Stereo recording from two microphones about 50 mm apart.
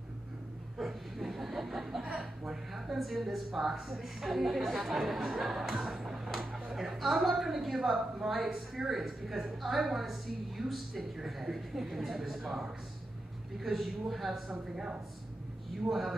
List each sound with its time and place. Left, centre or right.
0.7 s chuckle: centre
2.1 s a woman's voice: centre
14.5 s speech: centre
15.9 s a woman's voice: centre